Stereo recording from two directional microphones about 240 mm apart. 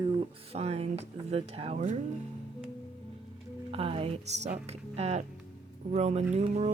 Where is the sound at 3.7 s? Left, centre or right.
Right.